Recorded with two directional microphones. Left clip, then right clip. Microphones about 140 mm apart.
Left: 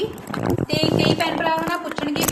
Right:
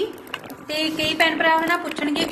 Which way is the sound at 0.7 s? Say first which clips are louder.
Left 1 dB; 20° right (ahead or behind).